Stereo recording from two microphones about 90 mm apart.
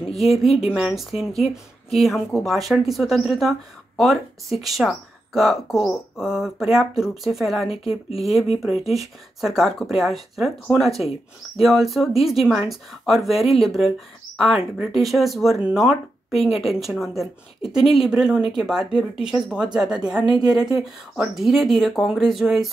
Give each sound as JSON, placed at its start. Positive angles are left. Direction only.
{"t": 0.1, "sound": "speech", "side_deg": 0}
{"t": 7.6, "sound": "a woman's voice", "side_deg": 90}
{"t": 8.2, "sound": "speech", "side_deg": 0}